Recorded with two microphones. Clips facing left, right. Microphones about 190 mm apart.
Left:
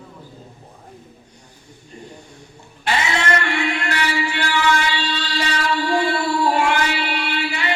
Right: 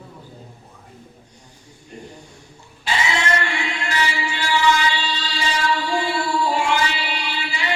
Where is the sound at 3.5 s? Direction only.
60° left (ahead or behind).